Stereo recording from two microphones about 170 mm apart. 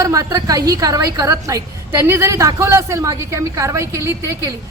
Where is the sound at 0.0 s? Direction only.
20° right (ahead or behind).